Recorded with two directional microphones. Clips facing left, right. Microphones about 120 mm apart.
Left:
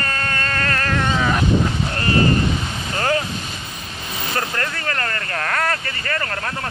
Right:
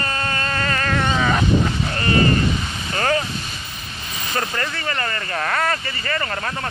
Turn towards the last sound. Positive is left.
turn(degrees=-5)  # may be behind; listen again after turning